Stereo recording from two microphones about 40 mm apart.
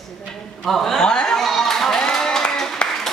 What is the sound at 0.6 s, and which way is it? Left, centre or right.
Speech, centre.